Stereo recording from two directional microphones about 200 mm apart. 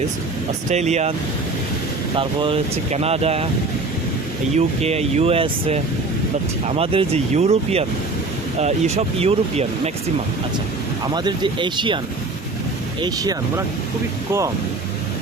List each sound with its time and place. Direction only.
0.7 s speech: 35° right (ahead or behind)
2.1 s speech: 25° right (ahead or behind)
4.5 s speech: 30° right (ahead or behind)
11.1 s speech: 20° right (ahead or behind)
13.0 s speech: 20° right (ahead or behind)